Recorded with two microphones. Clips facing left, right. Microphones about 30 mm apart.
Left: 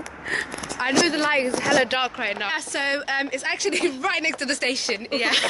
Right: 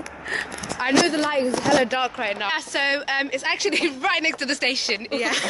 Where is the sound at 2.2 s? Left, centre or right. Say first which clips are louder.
Right 1 dB; centre.